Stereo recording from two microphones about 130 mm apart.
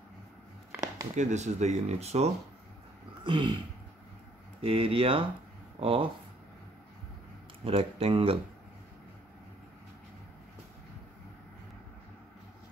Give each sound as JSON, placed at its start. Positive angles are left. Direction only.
{"t": 1.1, "sound": "speech", "side_deg": -65}
{"t": 3.3, "sound": "a sound", "side_deg": -40}
{"t": 4.6, "sound": "speech", "side_deg": -45}
{"t": 7.6, "sound": "speech", "side_deg": -45}